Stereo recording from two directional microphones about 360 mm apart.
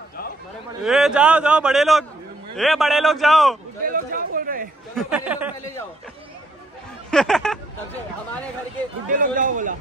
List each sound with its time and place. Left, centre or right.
0.8 s a man's voice: centre
3.8 s a sound: right
4.9 s a man's voice: centre
7.1 s speech: centre
9.1 s speech: right